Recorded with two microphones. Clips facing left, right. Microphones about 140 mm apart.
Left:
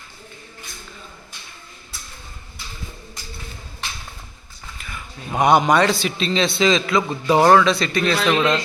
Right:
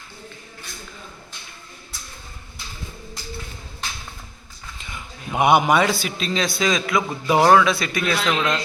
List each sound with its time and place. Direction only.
4.8 s a sound: 20° right (ahead or behind)
5.4 s a man's voice: 5° right (ahead or behind)
8.3 s a man's voice: 10° left (ahead or behind)